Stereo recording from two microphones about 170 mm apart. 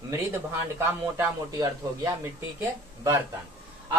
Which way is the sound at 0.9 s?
20° right (ahead or behind).